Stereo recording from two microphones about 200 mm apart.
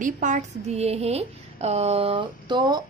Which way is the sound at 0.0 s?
40° right (ahead or behind).